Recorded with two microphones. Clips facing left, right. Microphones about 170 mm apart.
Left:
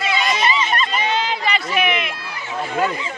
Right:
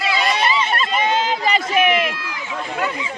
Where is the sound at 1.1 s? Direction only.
45° right (ahead or behind).